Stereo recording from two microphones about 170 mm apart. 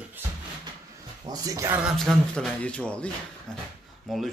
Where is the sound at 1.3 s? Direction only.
20° right (ahead or behind).